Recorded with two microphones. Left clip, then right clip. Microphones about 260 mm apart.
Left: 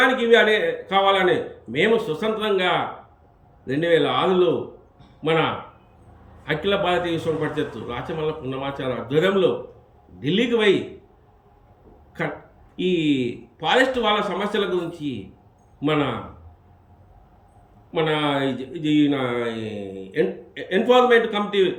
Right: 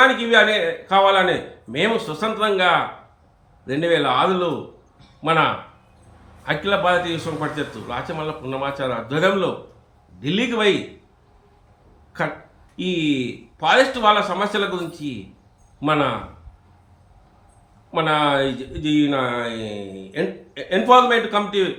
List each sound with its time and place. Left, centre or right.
0.0 s a man's voice: centre
6.7 s a man's voice: centre
12.7 s a man's voice: centre
17.9 s a man's voice: centre